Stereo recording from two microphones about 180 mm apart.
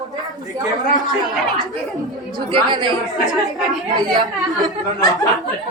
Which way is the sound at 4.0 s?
20° right (ahead or behind).